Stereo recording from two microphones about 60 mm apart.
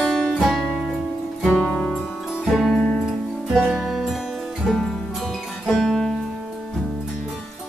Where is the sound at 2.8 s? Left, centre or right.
Centre.